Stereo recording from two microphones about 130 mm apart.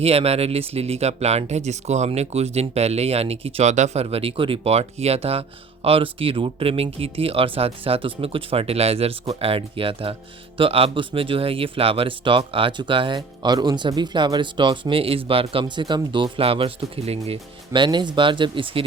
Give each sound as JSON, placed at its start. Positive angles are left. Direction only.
{"t": 0.0, "sound": "speech", "side_deg": -50}
{"t": 17.7, "sound": "speech", "side_deg": -35}